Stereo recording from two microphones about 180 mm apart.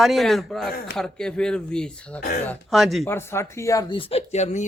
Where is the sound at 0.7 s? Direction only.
55° left (ahead or behind).